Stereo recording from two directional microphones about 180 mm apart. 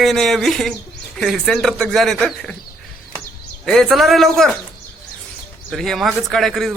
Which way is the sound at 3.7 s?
Centre (ahead or behind).